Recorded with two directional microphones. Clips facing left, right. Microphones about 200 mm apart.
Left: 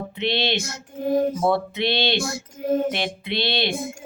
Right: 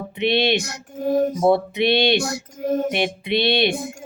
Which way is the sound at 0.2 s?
15° right (ahead or behind).